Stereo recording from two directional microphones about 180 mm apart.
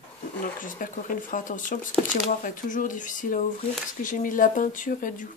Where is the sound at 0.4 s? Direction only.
50° left (ahead or behind).